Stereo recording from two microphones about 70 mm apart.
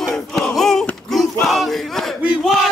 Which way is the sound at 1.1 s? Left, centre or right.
Centre.